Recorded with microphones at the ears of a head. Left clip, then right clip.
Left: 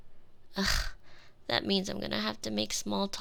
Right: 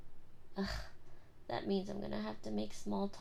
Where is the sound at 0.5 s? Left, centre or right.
Left.